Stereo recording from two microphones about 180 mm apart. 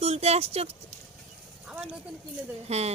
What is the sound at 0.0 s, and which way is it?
Speech, 35° right (ahead or behind).